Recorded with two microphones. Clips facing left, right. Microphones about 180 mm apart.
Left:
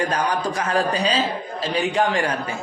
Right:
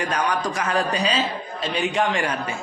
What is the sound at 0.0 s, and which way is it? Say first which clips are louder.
Speech: left 1 dB; 30° left (ahead or behind).